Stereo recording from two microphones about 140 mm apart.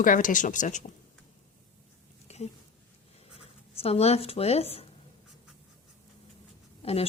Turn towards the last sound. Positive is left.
turn(degrees=45)  # may be behind; listen again after turning